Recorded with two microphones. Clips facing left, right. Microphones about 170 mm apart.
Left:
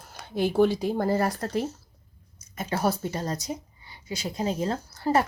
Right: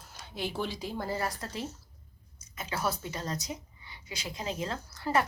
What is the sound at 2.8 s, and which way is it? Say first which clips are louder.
A woman's voice: left 7 dB; 40° left (ahead or behind).